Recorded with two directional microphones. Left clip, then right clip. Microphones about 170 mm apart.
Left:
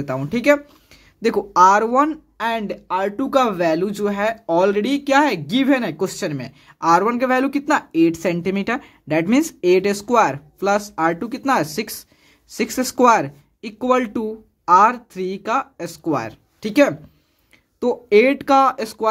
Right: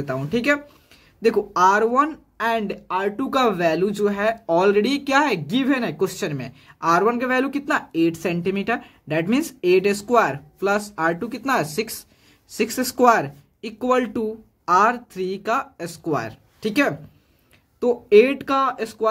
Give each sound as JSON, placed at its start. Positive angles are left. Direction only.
{"t": 0.0, "sound": "speech", "side_deg": 25}